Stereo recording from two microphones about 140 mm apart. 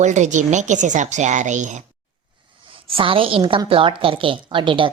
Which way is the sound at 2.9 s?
40° right (ahead or behind).